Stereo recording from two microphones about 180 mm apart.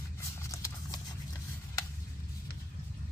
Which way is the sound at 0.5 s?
15° left (ahead or behind).